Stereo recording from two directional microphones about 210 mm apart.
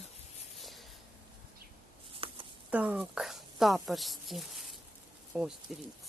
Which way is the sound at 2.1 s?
25° right (ahead or behind).